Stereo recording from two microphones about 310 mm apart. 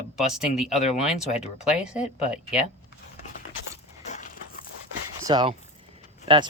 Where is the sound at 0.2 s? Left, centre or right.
Centre.